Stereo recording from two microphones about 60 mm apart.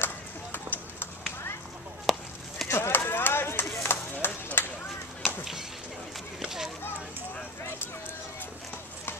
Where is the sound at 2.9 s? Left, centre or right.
Left.